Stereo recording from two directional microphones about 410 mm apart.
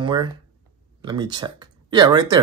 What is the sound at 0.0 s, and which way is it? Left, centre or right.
Speech, centre.